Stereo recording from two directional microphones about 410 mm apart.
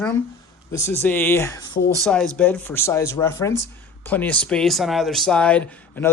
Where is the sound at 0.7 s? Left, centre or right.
Centre.